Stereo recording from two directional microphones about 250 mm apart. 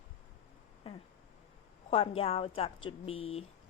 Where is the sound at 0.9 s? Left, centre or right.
Left.